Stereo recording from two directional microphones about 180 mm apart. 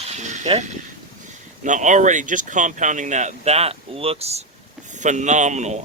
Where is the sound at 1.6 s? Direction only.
45° right (ahead or behind).